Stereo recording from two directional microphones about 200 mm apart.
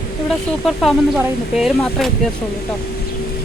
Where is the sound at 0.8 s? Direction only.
Centre (ahead or behind).